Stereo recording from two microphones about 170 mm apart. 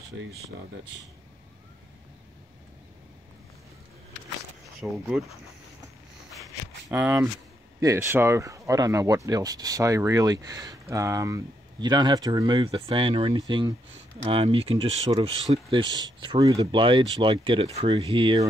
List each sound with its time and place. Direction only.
4.7 s speech: centre (ahead or behind)
6.9 s speech: 10° right (ahead or behind); by 18.4 s 30° right (ahead or behind)